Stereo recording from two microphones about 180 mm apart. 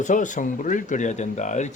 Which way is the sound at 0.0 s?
45° left (ahead or behind).